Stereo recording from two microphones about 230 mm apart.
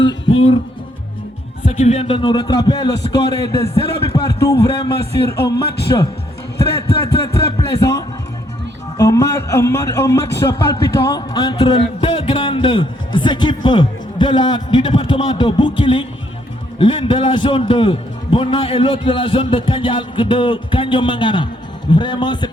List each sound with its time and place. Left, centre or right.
0.1 s music: left
1.6 s a man's voice: left